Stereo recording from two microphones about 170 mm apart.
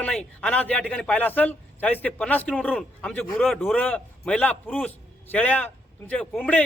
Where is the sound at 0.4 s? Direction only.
10° left (ahead or behind).